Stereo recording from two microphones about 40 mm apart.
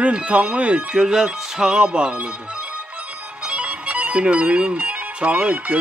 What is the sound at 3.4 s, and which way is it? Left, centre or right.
Music, right.